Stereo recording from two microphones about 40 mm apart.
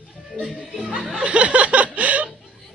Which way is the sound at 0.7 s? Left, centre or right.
Centre.